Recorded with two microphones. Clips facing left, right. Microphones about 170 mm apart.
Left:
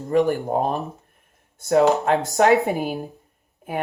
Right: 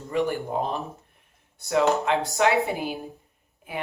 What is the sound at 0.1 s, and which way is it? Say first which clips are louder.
A woman's voice: left 6 dB; 40° left (ahead or behind).